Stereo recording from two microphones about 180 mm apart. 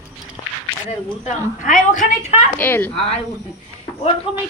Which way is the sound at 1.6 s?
45° left (ahead or behind).